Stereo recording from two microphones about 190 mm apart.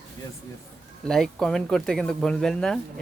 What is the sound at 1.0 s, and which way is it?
Speech, 5° left (ahead or behind).